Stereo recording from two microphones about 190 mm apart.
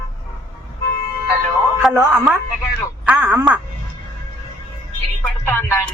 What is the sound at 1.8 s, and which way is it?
Speech, 5° right (ahead or behind).